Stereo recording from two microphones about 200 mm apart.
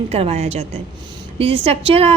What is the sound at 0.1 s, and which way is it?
A woman's voice, 30° right (ahead or behind).